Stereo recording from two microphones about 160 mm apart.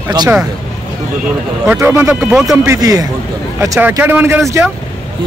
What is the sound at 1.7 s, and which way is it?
Speech, 15° right (ahead or behind).